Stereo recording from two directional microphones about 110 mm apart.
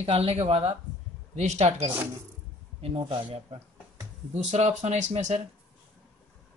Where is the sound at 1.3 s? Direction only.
90° right.